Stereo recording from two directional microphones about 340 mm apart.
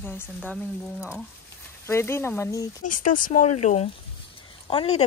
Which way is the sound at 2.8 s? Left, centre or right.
Left.